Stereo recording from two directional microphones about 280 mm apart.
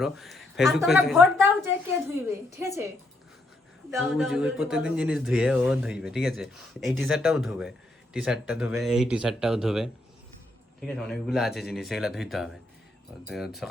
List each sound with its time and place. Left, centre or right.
0.0 s a woman's voice: centre
3.9 s speech: centre